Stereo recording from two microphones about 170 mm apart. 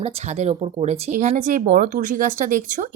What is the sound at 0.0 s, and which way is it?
Speech, 40° right (ahead or behind).